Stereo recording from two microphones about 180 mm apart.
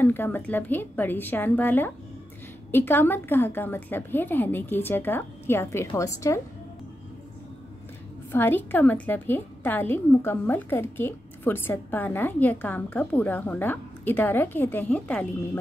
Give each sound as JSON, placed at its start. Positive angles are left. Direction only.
{"t": 0.0, "sound": "a woman's voice", "side_deg": 10}
{"t": 8.3, "sound": "a woman's voice", "side_deg": 10}